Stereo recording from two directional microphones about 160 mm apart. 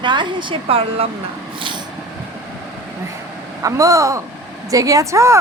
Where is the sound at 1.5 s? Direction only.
30° right (ahead or behind).